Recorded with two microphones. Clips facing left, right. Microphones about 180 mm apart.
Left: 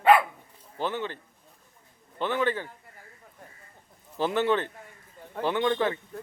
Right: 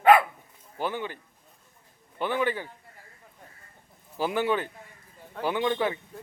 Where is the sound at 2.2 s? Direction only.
10° right (ahead or behind).